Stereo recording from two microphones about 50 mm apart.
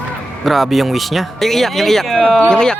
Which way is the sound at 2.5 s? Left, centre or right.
Centre.